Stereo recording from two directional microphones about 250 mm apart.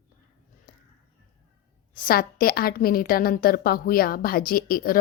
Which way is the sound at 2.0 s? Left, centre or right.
Left.